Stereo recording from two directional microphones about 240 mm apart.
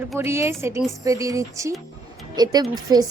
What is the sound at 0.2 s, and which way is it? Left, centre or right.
A woman's voice, centre.